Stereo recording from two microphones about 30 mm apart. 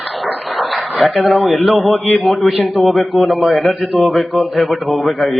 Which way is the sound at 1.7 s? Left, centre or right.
Left.